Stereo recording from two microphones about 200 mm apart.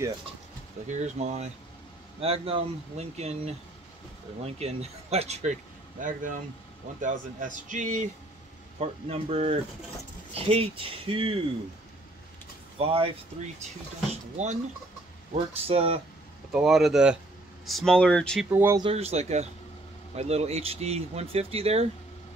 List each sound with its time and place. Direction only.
1.0 s speech: 35° right (ahead or behind)
4.6 s speech: 30° right (ahead or behind)
12.7 s speech: 30° right (ahead or behind)
15.3 s speech: 30° right (ahead or behind)
16.5 s speech: centre (ahead or behind)
18.5 s speech: 10° right (ahead or behind)
18.8 s speech: 30° right (ahead or behind)